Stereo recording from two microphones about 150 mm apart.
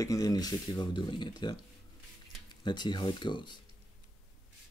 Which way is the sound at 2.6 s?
30° left (ahead or behind).